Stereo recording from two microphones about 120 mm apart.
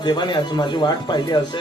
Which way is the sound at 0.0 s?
40° left (ahead or behind).